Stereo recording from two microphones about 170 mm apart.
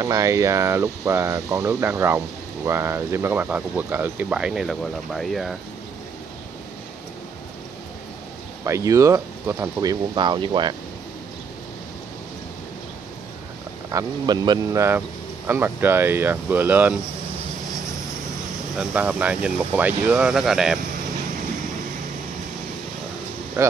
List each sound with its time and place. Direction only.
0.0 s speech: 20° right (ahead or behind); by 5.6 s centre (ahead or behind)
8.6 s speech: 20° right (ahead or behind)
13.8 s speech: 20° right (ahead or behind)
18.8 s speech: 10° right (ahead or behind)